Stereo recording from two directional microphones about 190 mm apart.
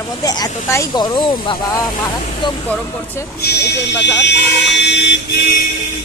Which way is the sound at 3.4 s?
60° left (ahead or behind).